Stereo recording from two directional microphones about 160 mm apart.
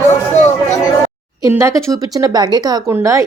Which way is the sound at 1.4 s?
20° right (ahead or behind).